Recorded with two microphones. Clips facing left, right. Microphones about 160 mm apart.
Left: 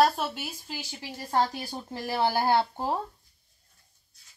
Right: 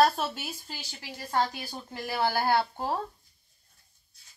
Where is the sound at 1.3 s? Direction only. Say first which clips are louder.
Left 2 dB; 35° left (ahead or behind); by 3.0 s 20° left (ahead or behind).